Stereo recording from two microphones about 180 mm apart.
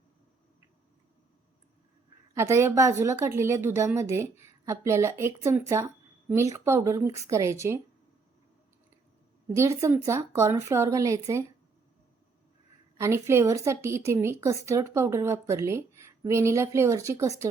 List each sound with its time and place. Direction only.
2.3 s a woman's voice: 15° right (ahead or behind)
9.6 s a woman's voice: 15° right (ahead or behind)
13.0 s a woman's voice: 15° right (ahead or behind)